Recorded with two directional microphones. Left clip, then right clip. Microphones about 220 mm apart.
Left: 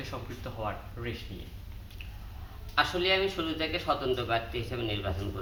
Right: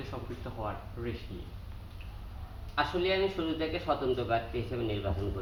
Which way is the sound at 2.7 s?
10° left (ahead or behind).